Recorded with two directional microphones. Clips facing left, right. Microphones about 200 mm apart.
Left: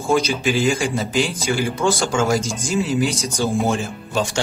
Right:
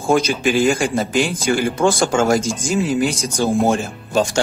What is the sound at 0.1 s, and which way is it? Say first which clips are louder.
Speech: right 3 dB; 50° right (ahead or behind).